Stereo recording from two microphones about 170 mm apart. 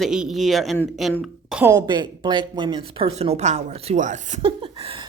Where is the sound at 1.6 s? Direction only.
20° right (ahead or behind); by 4.4 s 45° right (ahead or behind).